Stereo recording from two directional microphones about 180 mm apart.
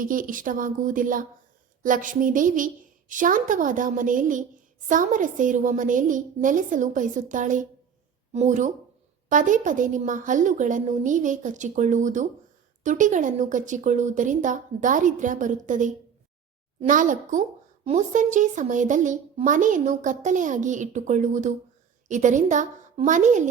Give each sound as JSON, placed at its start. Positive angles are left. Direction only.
{"t": 0.0, "sound": "a woman's voice", "side_deg": -50}